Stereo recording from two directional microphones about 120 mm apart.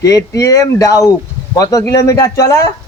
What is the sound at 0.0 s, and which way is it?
A man's voice, 30° left (ahead or behind).